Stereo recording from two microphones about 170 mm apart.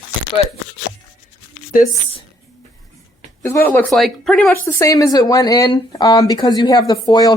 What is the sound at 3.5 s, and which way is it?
Speech, 10° left (ahead or behind).